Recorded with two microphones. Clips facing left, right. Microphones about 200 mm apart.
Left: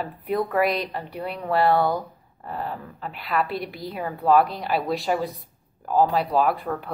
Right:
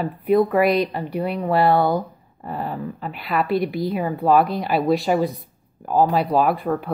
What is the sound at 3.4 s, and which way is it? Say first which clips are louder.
Speech: right 9 dB; 50° right (ahead or behind).